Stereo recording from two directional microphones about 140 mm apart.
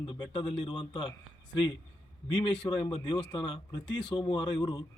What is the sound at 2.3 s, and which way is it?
Speech, 35° left (ahead or behind).